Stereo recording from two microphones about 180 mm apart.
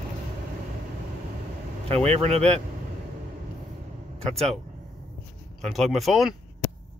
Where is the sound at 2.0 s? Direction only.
35° right (ahead or behind).